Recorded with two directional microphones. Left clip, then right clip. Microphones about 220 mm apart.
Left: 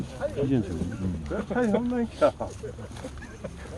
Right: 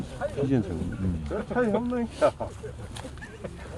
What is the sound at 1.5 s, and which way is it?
Speech, 40° left (ahead or behind).